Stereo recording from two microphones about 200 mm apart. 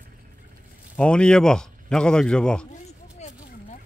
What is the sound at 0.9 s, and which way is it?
Speech, 5° left (ahead or behind).